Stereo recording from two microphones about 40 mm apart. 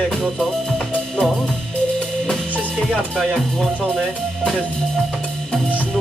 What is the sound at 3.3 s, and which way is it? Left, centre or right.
Speech, centre.